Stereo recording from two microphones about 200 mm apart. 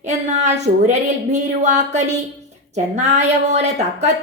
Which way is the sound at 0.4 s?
35° right (ahead or behind).